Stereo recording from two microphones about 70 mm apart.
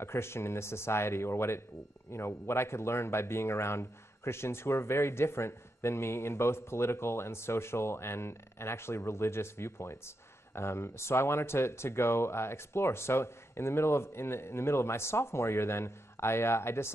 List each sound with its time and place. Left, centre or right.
0.0 s speech: left